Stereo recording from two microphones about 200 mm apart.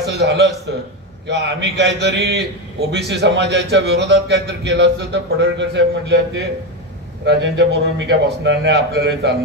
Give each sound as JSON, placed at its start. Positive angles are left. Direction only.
{"t": 0.0, "sound": "a man's voice", "side_deg": -60}